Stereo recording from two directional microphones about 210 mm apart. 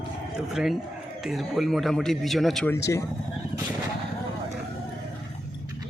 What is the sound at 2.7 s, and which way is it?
Speech, 15° left (ahead or behind).